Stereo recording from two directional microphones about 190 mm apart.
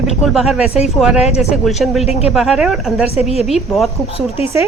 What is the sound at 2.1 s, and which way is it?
Speech, 35° left (ahead or behind).